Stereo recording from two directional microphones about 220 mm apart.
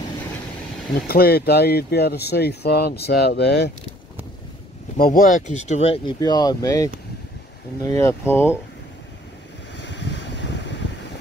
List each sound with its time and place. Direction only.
1.0 s speech: 45° left (ahead or behind)
4.9 s speech: 40° left (ahead or behind)
6.1 s speech: 15° left (ahead or behind)
9.8 s a sound: 55° left (ahead or behind)